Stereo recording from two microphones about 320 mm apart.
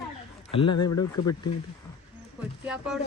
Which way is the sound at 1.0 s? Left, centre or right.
Centre.